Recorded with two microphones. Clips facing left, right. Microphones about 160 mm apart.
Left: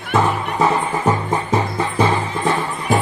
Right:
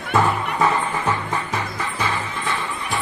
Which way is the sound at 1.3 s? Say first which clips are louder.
Left 7 dB; 25° left (ahead or behind).